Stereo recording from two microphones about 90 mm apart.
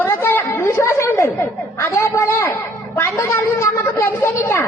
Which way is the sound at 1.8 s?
30° left (ahead or behind).